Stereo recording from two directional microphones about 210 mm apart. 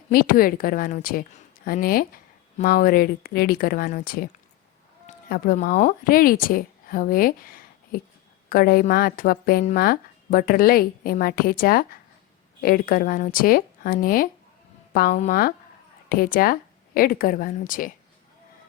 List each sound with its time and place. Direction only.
0.1 s speech: 45° left (ahead or behind)
5.3 s a woman's voice: 45° left (ahead or behind)